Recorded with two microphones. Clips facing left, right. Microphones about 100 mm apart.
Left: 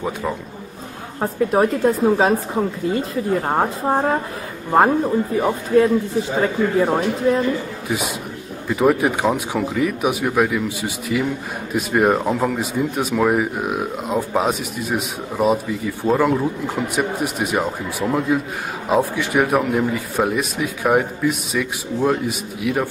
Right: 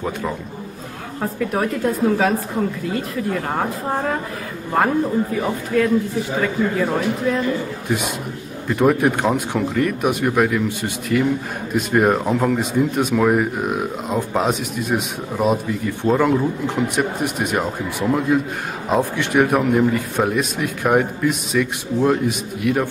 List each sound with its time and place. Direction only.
1.2 s speech: 30° left (ahead or behind)
8.6 s speech: centre (ahead or behind)